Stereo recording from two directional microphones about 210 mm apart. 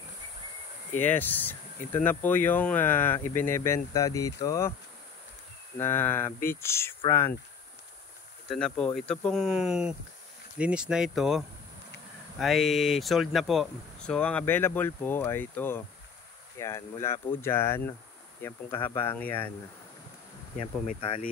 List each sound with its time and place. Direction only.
0.9 s speech: 10° left (ahead or behind)
5.8 s speech: 10° left (ahead or behind)
8.5 s speech: 5° left (ahead or behind)
20.8 s speech: 30° left (ahead or behind)